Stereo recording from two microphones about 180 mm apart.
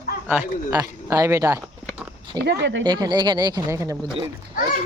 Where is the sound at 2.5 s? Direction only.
75° right (ahead or behind).